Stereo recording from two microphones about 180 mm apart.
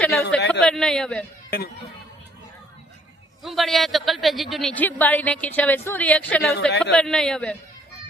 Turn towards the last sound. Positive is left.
turn(degrees=5)  # may be behind; listen again after turning